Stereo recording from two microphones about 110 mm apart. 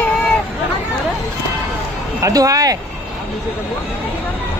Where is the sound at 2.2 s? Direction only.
30° right (ahead or behind).